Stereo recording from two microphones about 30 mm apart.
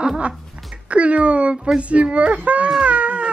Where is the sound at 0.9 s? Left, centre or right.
Right.